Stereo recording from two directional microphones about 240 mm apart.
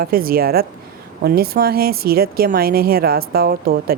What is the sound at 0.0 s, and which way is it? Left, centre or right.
A woman's voice, right.